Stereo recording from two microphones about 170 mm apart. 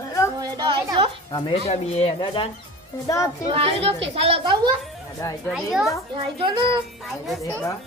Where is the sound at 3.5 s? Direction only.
35° right (ahead or behind).